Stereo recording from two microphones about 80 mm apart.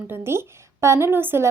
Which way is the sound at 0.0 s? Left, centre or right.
Right.